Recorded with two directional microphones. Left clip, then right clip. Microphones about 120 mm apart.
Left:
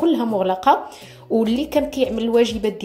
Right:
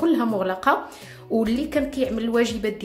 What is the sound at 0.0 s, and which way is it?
A woman's voice, 20° left (ahead or behind).